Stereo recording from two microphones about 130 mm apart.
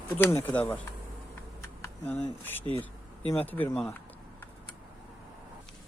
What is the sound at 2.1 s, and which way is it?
Speech, 15° left (ahead or behind).